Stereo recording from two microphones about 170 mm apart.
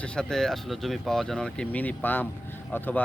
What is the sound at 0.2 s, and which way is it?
Speech, centre (ahead or behind).